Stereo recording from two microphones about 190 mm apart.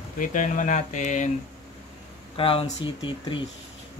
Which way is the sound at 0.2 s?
40° left (ahead or behind).